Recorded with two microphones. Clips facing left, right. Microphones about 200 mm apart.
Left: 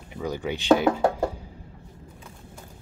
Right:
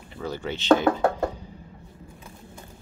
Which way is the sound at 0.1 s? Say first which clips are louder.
Left 2 dB; 15° left (ahead or behind).